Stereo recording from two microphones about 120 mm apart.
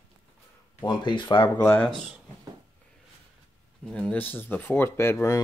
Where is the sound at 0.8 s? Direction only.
35° left (ahead or behind).